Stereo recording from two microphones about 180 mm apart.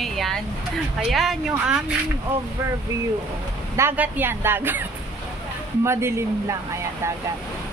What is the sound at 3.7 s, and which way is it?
Speech, 10° right (ahead or behind).